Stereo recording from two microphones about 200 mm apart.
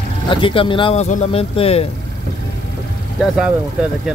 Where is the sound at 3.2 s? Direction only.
5° right (ahead or behind).